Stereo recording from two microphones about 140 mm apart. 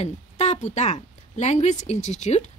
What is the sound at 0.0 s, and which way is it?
Speech, 55° left (ahead or behind).